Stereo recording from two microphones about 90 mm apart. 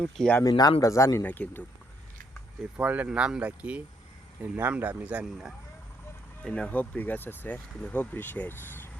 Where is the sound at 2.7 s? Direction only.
15° right (ahead or behind).